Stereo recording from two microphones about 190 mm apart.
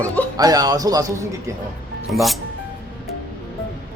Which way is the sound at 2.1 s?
Centre (ahead or behind).